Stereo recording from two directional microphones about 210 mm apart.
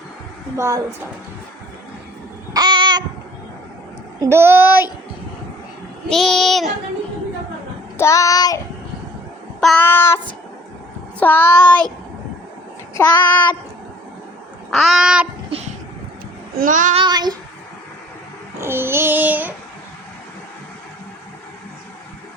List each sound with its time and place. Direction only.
0.5 s child singing: 15° right (ahead or behind)
2.5 s a sound: 20° right (ahead or behind)
4.2 s child singing: 10° right (ahead or behind)
6.1 s child singing: centre (ahead or behind)
7.9 s child singing: 15° left (ahead or behind)
9.6 s child singing: 5° left (ahead or behind)
11.2 s child singing: 10° left (ahead or behind)
12.9 s child singing: 20° left (ahead or behind)
14.7 s child singing: centre (ahead or behind)
15.4 s vehicle: 30° right (ahead or behind)
16.6 s child singing: 40° right (ahead or behind)
17.0 s child singing: 20° right (ahead or behind)
18.6 s child singing: 10° right (ahead or behind)